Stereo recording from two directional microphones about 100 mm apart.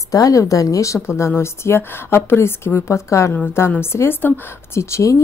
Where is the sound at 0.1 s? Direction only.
35° left (ahead or behind).